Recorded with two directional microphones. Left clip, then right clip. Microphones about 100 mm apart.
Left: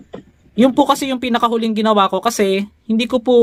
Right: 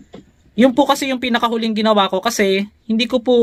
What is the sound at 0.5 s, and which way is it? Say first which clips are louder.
A man's voice: even; 15° left (ahead or behind).